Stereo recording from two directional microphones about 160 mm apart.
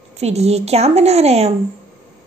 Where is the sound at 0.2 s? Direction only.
40° right (ahead or behind).